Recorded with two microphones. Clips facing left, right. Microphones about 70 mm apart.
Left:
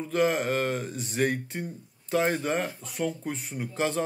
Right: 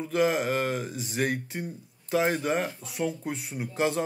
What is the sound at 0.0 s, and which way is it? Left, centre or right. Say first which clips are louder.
Speech: even; centre.